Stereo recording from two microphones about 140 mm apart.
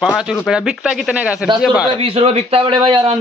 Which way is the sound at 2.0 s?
45° right (ahead or behind).